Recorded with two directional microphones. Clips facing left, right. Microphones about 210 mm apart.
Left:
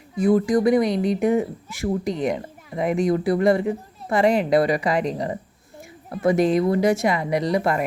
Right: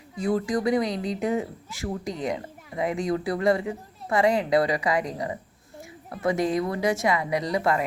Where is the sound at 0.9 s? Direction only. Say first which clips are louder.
Left 6 dB; 60° left (ahead or behind).